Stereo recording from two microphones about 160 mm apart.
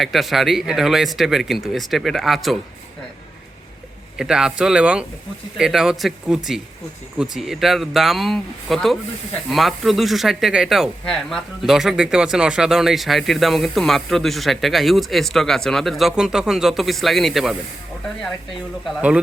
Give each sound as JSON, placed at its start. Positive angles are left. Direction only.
{"t": 0.0, "sound": "speech", "side_deg": 0}
{"t": 4.2, "sound": "speech", "side_deg": -5}